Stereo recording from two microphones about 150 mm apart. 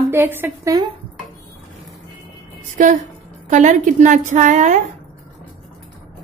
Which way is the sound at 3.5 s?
55° right (ahead or behind).